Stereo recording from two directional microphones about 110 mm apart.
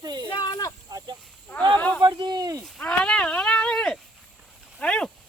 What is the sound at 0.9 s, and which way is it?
Speech, 35° right (ahead or behind).